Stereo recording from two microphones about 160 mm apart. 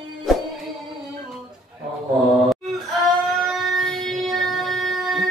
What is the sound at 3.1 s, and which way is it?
Child singing, centre (ahead or behind).